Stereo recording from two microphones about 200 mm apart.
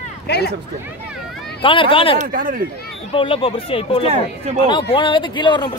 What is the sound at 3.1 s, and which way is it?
Speech, 25° left (ahead or behind).